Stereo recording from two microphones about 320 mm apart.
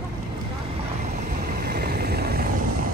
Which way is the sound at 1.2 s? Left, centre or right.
Right.